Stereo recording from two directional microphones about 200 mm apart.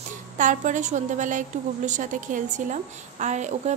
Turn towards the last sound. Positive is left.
turn(degrees=-35)  # may be behind; listen again after turning